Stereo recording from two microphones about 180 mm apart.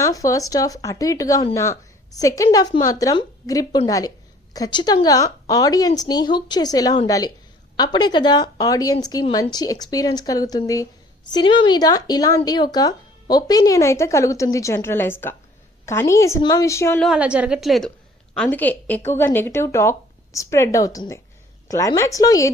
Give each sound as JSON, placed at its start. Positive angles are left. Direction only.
{"t": 0.0, "sound": "speech", "side_deg": 20}
{"t": 17.0, "sound": "a woman's voice", "side_deg": -5}